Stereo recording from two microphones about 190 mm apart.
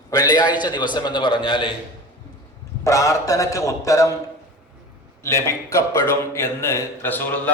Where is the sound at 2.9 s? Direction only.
15° left (ahead or behind).